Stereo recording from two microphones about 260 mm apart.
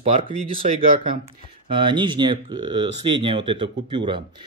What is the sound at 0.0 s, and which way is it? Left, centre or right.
Speech, right.